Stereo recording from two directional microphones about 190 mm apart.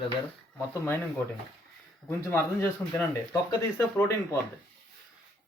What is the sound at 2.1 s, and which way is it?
Speech, 15° left (ahead or behind).